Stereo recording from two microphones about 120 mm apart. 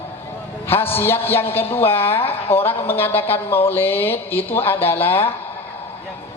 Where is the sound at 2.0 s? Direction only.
55° left (ahead or behind).